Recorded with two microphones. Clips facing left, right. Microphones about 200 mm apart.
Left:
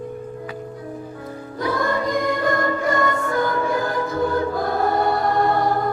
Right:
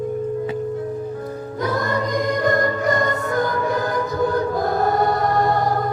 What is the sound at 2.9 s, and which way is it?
Music, 40° right (ahead or behind).